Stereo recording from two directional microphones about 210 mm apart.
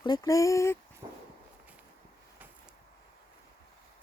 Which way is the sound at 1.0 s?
20° right (ahead or behind).